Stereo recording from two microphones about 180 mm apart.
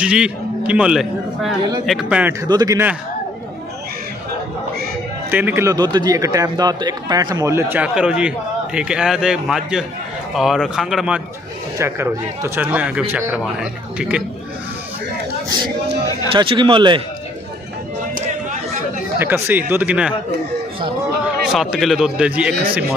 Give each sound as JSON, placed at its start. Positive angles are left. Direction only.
{"t": 0.0, "sound": "a man's voice", "side_deg": -5}
{"t": 2.4, "sound": "a man's voice", "side_deg": -20}
{"t": 5.3, "sound": "a man's voice", "side_deg": -10}
{"t": 11.8, "sound": "speech", "side_deg": -15}
{"t": 16.3, "sound": "a man's voice", "side_deg": -25}
{"t": 18.1, "sound": "a sound", "side_deg": -45}
{"t": 19.1, "sound": "speech", "side_deg": -15}
{"t": 21.5, "sound": "a man's voice", "side_deg": 0}